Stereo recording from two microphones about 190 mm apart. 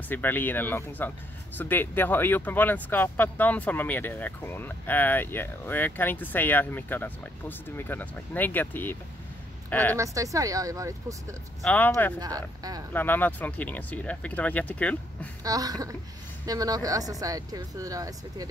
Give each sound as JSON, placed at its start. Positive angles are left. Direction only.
{"t": 0.1, "sound": "a woman's voice", "side_deg": 10}
{"t": 9.9, "sound": "speech", "side_deg": -15}
{"t": 11.6, "sound": "speech", "side_deg": 10}
{"t": 15.4, "sound": "speech", "side_deg": -20}